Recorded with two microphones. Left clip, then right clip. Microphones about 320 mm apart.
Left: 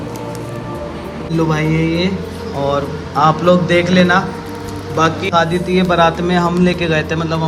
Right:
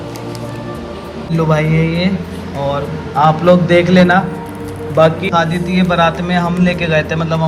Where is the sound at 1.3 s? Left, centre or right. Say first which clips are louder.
Right 2 dB; centre.